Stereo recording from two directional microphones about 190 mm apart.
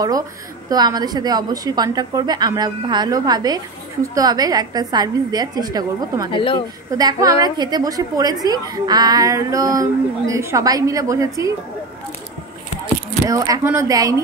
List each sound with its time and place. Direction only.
0.7 s a woman's voice: 20° right (ahead or behind)
6.3 s speech: 25° left (ahead or behind)
6.9 s a woman's voice: 20° right (ahead or behind)
13.3 s speech: 15° right (ahead or behind)